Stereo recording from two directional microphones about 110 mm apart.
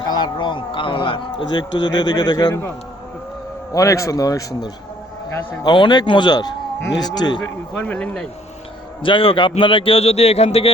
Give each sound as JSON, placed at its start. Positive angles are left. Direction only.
{"t": 0.1, "sound": "speech", "side_deg": 45}
{"t": 3.7, "sound": "a man's voice", "side_deg": 30}
{"t": 5.6, "sound": "a man's voice", "side_deg": 45}
{"t": 7.7, "sound": "speech", "side_deg": 10}
{"t": 9.0, "sound": "a man's voice", "side_deg": 50}